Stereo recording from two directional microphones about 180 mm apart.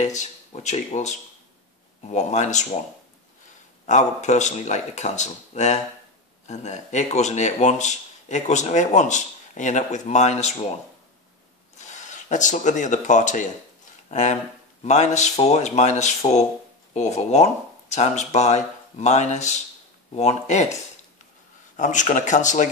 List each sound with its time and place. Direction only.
0.0 s speech: 40° left (ahead or behind)
3.8 s speech: 40° left (ahead or behind)
11.8 s speech: 40° left (ahead or behind)
21.7 s speech: 45° left (ahead or behind)